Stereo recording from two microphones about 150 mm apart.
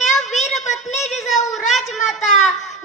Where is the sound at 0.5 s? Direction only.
50° left (ahead or behind).